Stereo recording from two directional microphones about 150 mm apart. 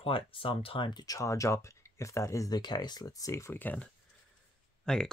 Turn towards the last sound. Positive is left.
turn(degrees=5)  # may be behind; listen again after turning